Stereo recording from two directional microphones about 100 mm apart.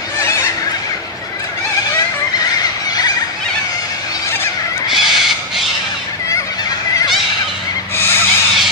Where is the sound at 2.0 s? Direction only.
40° left (ahead or behind).